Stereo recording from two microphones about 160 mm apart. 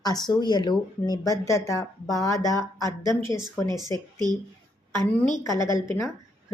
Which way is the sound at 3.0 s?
30° right (ahead or behind).